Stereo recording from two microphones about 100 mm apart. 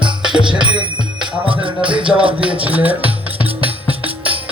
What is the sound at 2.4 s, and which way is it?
Speech, 15° right (ahead or behind).